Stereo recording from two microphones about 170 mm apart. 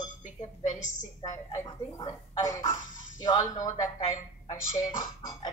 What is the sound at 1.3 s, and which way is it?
Speech, 20° left (ahead or behind).